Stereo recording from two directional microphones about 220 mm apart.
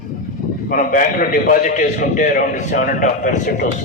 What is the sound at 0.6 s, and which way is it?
A man's voice, 40° left (ahead or behind).